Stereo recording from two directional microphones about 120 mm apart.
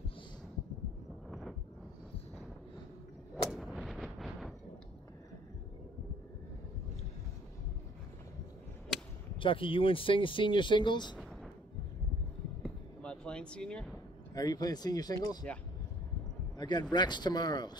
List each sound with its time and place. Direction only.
3.4 s artillery fire: centre (ahead or behind)
9.4 s speech: 45° left (ahead or behind)
12.6 s a sound: 10° left (ahead or behind)
14.3 s speech: 30° left (ahead or behind)
16.5 s a man's voice: 35° left (ahead or behind)